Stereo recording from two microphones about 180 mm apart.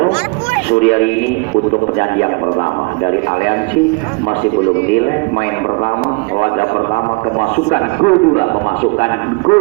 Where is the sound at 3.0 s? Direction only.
60° left (ahead or behind).